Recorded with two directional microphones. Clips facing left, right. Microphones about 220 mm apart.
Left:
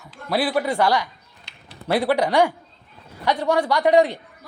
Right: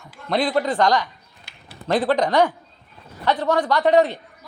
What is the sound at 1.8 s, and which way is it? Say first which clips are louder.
Speech: even; 10° left (ahead or behind).